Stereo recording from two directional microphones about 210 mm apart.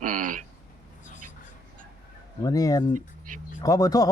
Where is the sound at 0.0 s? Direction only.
40° right (ahead or behind).